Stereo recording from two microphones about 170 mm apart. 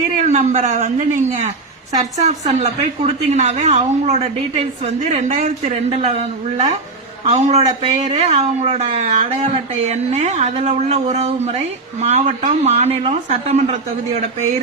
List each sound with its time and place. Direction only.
0.3 s a woman's voice: 40° right (ahead or behind)
7.3 s a woman's voice: 40° right (ahead or behind)